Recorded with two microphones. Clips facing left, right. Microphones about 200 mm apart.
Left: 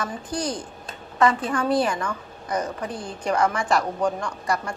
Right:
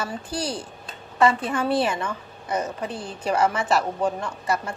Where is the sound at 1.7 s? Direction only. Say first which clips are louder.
Left 2 dB; 25° right (ahead or behind).